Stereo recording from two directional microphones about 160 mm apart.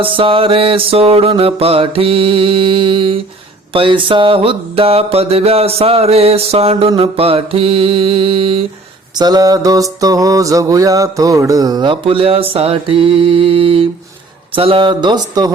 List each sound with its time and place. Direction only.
0.0 s mantra: 35° right (ahead or behind)
9.1 s mantra: 25° right (ahead or behind)